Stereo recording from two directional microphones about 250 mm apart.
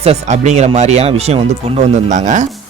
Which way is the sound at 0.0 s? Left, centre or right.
Right.